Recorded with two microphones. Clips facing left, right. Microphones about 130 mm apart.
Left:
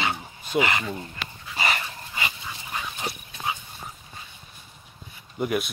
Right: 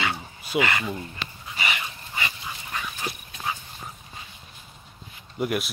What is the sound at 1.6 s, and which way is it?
Dog, 40° left (ahead or behind).